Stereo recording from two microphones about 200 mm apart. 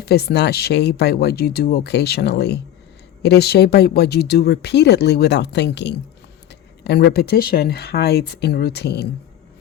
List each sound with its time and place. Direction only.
0.0 s speech: 55° left (ahead or behind)